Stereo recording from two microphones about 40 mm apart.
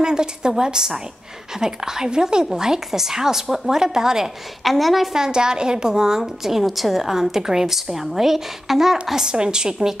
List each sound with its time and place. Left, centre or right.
0.0 s a woman's voice: centre
4.6 s a woman's voice: centre
5.1 s a woman's voice: centre